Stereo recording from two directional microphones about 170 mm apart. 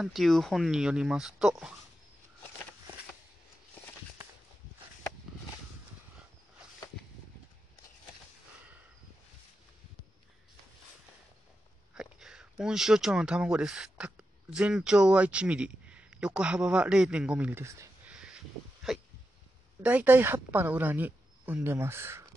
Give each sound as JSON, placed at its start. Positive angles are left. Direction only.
{"t": 0.0, "sound": "speech", "side_deg": 0}
{"t": 11.9, "sound": "speech", "side_deg": -5}
{"t": 18.1, "sound": "a sound", "side_deg": -5}
{"t": 19.8, "sound": "speech", "side_deg": -10}